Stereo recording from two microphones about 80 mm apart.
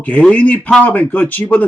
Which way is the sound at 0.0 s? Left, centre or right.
Centre.